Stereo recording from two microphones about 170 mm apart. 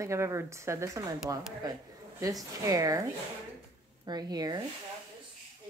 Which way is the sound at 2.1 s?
20° right (ahead or behind).